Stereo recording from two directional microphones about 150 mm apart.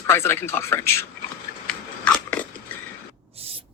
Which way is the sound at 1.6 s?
10° left (ahead or behind).